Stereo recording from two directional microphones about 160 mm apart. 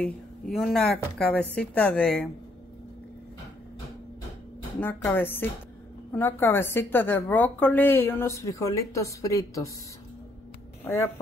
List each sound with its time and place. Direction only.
0.0 s a woman's voice: centre (ahead or behind)
4.7 s a woman's voice: 10° left (ahead or behind)